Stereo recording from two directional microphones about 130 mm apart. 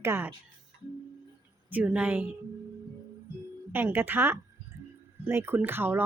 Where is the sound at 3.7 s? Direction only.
15° right (ahead or behind).